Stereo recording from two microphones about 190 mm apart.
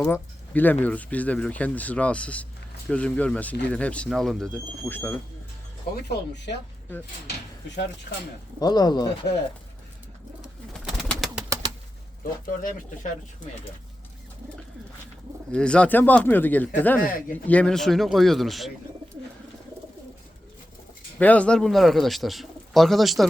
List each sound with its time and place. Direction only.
0.0 s speech: 10° left (ahead or behind)
6.1 s speech: 65° left (ahead or behind)
8.5 s speech: 20° left (ahead or behind)
10.8 s bird: centre (ahead or behind)
11.4 s bird: 15° right (ahead or behind)
12.2 s speech: 45° left (ahead or behind)
15.5 s speech: 5° left (ahead or behind)
21.2 s speech: 5° left (ahead or behind)